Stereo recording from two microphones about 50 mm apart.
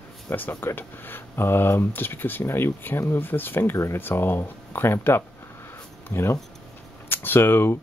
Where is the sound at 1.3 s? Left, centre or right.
Left.